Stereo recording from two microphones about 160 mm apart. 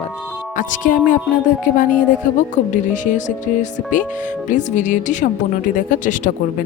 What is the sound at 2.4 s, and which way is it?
Speech, 55° left (ahead or behind).